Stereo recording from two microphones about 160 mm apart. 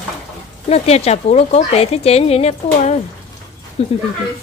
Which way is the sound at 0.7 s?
40° left (ahead or behind).